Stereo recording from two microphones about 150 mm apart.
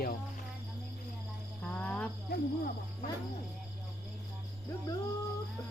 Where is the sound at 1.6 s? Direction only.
10° left (ahead or behind).